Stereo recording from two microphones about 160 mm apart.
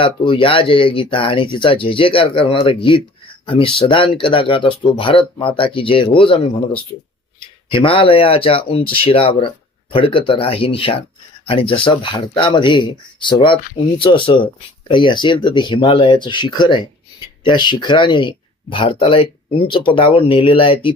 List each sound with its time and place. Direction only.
0.0 s speech: 30° left (ahead or behind)
7.7 s speech: 30° left (ahead or behind)